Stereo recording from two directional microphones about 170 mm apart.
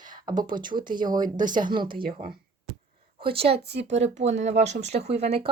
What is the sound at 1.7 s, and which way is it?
Speech, 25° right (ahead or behind).